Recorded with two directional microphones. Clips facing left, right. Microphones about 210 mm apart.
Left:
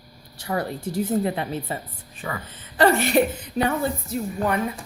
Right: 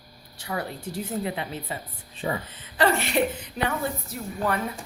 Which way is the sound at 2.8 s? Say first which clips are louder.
Left 5 dB; 45° left (ahead or behind).